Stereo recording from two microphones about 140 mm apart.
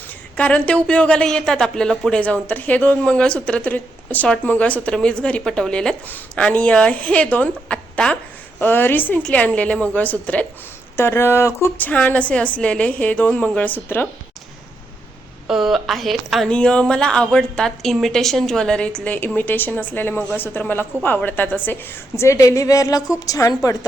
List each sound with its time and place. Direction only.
0.3 s speech: 10° left (ahead or behind)
15.4 s a woman's voice: 5° right (ahead or behind); by 23.6 s 25° left (ahead or behind)